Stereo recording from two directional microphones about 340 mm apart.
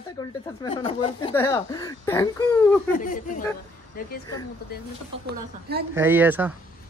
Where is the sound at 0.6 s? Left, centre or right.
Centre.